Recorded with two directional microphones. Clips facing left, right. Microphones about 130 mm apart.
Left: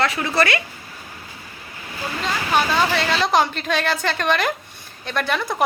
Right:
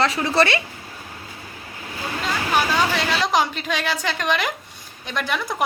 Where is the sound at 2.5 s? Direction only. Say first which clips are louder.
Left 2 dB; 15° right (ahead or behind).